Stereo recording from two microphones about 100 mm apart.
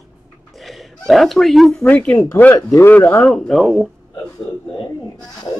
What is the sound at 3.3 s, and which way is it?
Speech, 5° left (ahead or behind).